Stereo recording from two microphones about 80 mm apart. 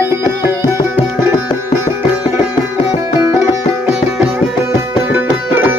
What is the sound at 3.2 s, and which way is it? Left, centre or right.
Music, right.